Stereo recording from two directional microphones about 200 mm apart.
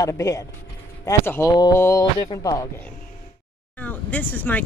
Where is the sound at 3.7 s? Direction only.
10° left (ahead or behind).